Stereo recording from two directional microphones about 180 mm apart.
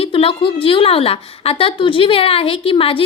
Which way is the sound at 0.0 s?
30° left (ahead or behind).